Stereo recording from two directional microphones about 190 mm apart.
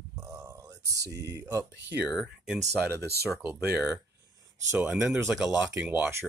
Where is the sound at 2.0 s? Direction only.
Centre (ahead or behind).